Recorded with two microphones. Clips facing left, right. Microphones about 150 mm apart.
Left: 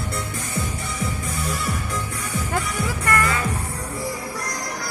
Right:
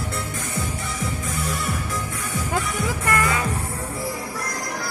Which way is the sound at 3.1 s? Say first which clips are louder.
Left 1 dB; 20° right (ahead or behind).